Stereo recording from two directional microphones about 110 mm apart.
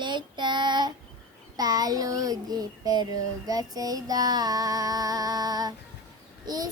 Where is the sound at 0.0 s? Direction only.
45° right (ahead or behind).